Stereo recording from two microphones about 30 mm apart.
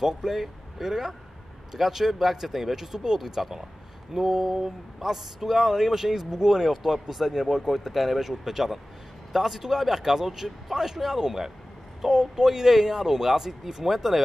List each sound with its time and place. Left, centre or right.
0.0 s speech: centre